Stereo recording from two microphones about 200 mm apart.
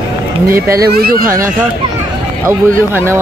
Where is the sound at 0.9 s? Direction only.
50° right (ahead or behind).